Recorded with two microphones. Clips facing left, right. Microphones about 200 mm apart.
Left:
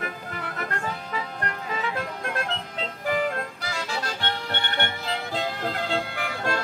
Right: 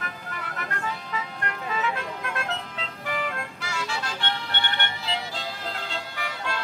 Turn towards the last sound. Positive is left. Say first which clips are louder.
# left 4 dB
turn(degrees=45)  # may be behind; listen again after turning